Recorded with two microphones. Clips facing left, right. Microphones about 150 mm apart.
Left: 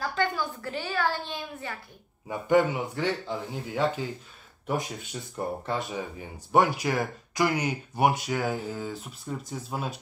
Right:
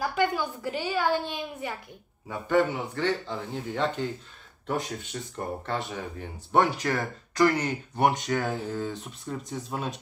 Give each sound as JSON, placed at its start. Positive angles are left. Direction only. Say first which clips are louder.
{"t": 0.0, "sound": "a child's voice", "louder": "right 2 dB", "side_deg": -15}
{"t": 2.2, "sound": "speech", "louder": "left 2 dB", "side_deg": 15}